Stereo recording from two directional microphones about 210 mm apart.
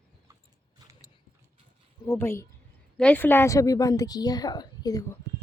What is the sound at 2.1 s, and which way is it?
A woman's voice, 10° left (ahead or behind).